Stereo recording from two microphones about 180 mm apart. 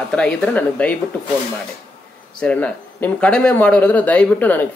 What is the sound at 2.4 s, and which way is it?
Speech, 10° left (ahead or behind).